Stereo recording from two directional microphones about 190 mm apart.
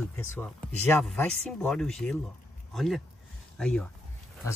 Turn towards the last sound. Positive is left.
turn(degrees=5)  # may be behind; listen again after turning